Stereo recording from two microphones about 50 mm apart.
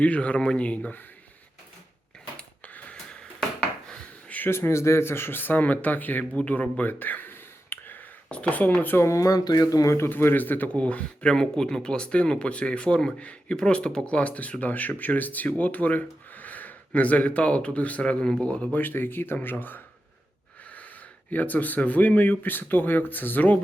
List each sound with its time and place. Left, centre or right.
0.0 s speech: left
4.4 s speech: left
6.3 s speech: left
7.3 s a sound: left
8.3 s speech: left
9.0 s speech: left
10.1 s speech: left
10.8 s speech: left
18.7 s speech: left
21.2 s speech: left